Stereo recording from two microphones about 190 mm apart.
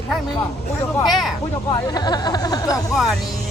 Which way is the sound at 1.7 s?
20° left (ahead or behind).